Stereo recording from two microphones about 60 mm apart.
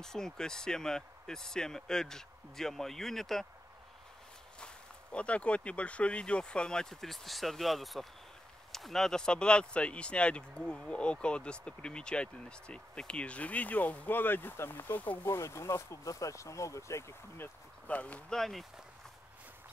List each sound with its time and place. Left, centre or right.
0.0 s speech: centre
4.6 s speech: centre; by 15.1 s left
15.2 s speech: left
17.8 s speech: left
18.3 s speech: centre